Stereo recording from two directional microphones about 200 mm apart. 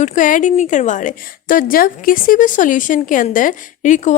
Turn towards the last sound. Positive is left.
turn(degrees=40)  # may be behind; listen again after turning